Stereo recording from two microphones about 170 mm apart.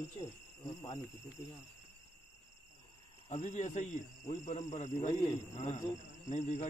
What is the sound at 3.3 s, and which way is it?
Speech, 45° left (ahead or behind).